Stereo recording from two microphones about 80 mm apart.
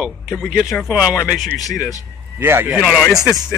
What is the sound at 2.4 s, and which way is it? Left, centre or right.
Speech, right.